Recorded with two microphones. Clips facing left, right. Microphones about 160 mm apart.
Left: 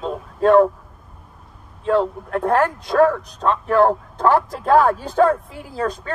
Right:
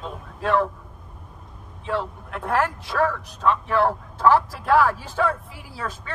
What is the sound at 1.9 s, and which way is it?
Speech, 45° left (ahead or behind).